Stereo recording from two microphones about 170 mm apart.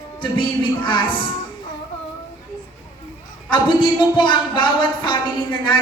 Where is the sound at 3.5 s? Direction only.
30° left (ahead or behind).